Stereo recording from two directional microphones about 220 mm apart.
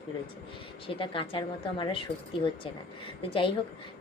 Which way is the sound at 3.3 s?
25° left (ahead or behind).